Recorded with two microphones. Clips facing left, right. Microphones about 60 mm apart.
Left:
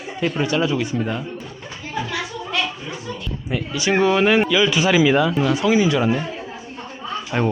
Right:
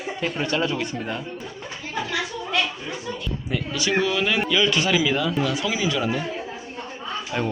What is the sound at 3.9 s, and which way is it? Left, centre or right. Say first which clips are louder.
Speech: left 7 dB; left.